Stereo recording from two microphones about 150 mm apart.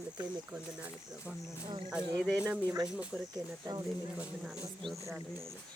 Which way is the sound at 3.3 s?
25° right (ahead or behind).